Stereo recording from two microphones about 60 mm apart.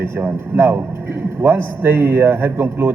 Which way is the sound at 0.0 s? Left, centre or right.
Right.